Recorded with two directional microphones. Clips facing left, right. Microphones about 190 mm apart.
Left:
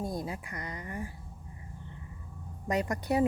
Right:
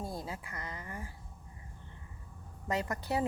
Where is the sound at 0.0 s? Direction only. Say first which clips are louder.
Left 5 dB; 15° left (ahead or behind).